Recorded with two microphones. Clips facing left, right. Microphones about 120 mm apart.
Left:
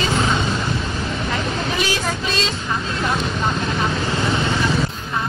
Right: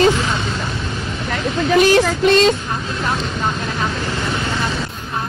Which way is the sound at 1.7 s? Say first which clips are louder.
Right 10 dB; 55° right (ahead or behind).